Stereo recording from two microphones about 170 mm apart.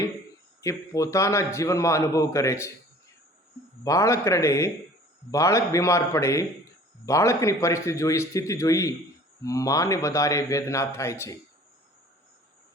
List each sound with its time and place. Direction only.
0.6 s a man's voice: 20° left (ahead or behind)
3.8 s a man's voice: 20° left (ahead or behind)